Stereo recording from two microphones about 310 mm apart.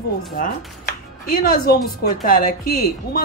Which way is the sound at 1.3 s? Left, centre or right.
Left.